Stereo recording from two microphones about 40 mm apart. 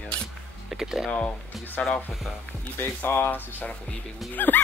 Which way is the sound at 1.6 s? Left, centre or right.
Left.